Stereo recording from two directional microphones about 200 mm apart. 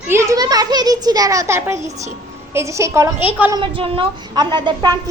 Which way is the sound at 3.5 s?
25° right (ahead or behind).